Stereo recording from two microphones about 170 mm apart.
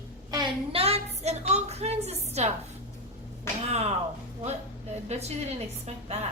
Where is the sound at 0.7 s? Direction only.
35° right (ahead or behind).